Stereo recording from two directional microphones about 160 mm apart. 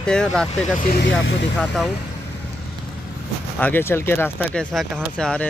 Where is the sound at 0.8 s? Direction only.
75° left (ahead or behind).